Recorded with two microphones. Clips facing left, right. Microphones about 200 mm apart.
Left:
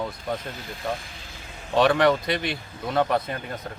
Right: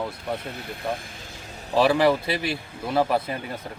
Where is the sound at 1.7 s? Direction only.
5° right (ahead or behind).